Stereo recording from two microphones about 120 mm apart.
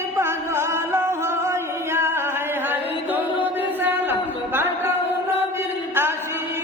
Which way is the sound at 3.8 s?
15° right (ahead or behind).